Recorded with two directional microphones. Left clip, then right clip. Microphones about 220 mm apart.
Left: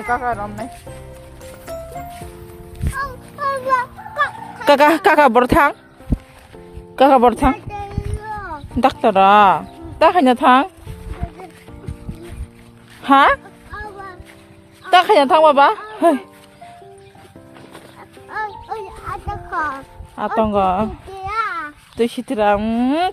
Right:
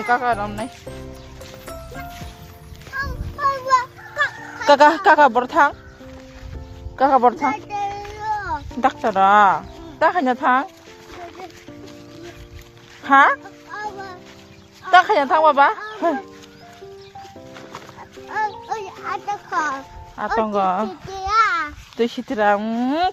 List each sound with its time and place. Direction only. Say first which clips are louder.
0.1 s speech: right 1 dB; 10° left (ahead or behind)
1.7 s music: left 7 dB; centre (ahead or behind)
3.0 s a sound: right 1 dB; 30° left (ahead or behind)
4.6 s speech: left 1 dB; 35° left (ahead or behind)
6.9 s speech: left 4 dB; 50° left (ahead or behind)
8.2 s a sound: right 5 dB; 5° right (ahead or behind)
8.8 s speech: left 4 dB; 40° left (ahead or behind)
13.0 s speech: left 2 dB; 40° left (ahead or behind)
14.8 s speech: left 2 dB; 40° left (ahead or behind)
18.3 s music: right 2 dB; centre (ahead or behind)
19.5 s a child's voice: left 1 dB; 15° right (ahead or behind)
20.1 s speech: left 3 dB; 30° left (ahead or behind)
21.1 s a sound: right 5 dB; 5° right (ahead or behind)
21.9 s speech: left 2 dB; 10° left (ahead or behind)